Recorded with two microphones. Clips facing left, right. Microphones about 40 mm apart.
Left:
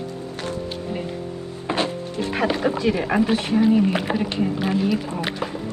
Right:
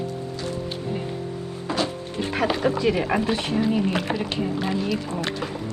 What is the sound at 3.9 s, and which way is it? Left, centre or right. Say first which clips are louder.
Speech: left 2 dB; centre.